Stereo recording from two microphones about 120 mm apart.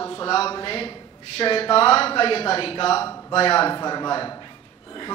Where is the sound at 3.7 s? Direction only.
35° left (ahead or behind).